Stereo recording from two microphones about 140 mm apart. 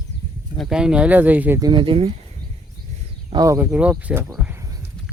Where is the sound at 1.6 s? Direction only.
35° right (ahead or behind).